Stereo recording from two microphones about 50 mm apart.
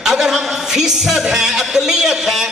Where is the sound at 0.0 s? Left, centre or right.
Centre.